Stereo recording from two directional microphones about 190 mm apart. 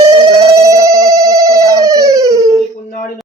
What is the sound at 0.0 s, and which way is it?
Music, 15° right (ahead or behind).